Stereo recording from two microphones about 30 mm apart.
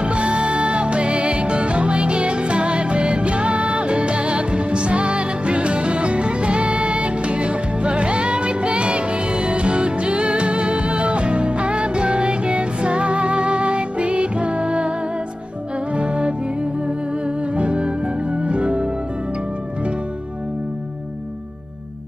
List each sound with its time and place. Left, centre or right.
0.0 s music: right
17.6 s music: right